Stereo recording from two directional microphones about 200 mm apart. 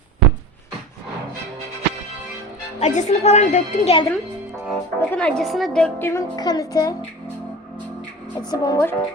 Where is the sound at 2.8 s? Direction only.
35° left (ahead or behind).